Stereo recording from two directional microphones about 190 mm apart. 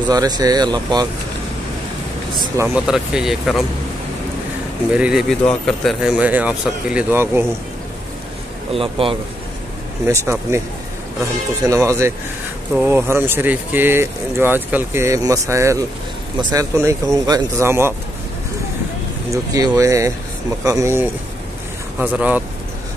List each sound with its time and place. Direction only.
0.1 s speech: 20° right (ahead or behind)
2.4 s speech: 15° right (ahead or behind)
2.9 s speech: centre (ahead or behind)
4.9 s speech: 5° right (ahead or behind)
8.7 s speech: 30° right (ahead or behind)
10.2 s speech: 15° right (ahead or behind)
11.6 s speech: 15° right (ahead or behind)
19.3 s speech: 20° right (ahead or behind)